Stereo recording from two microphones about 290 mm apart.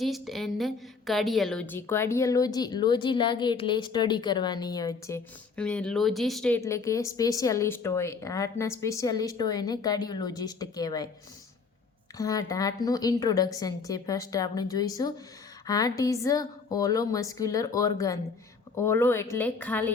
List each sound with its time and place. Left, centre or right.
0.0 s a woman's voice: centre
12.1 s a woman's voice: centre